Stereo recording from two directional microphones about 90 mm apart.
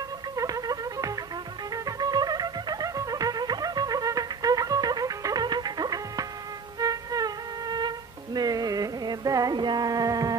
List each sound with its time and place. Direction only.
0.4 s music: 40° right (ahead or behind)